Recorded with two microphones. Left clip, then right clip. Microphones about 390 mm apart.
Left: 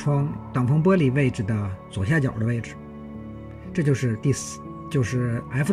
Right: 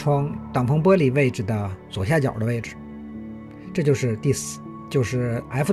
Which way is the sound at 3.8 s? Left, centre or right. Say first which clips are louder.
Right 4 dB; centre.